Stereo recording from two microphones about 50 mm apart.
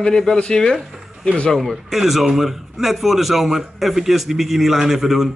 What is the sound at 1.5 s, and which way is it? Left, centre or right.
A man's voice, centre.